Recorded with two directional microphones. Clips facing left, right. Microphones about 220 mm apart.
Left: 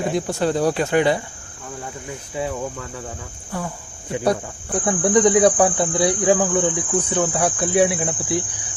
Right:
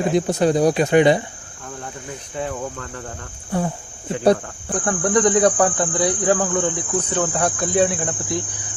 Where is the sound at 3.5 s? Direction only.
25° right (ahead or behind).